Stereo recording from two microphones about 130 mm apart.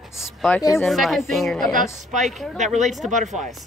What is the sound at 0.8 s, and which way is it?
Speech, centre (ahead or behind).